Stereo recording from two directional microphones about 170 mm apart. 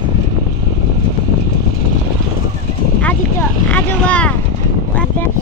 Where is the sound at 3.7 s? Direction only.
10° left (ahead or behind).